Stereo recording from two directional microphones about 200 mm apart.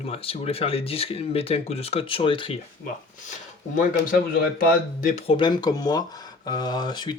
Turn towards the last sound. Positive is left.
turn(degrees=20)  # may be behind; listen again after turning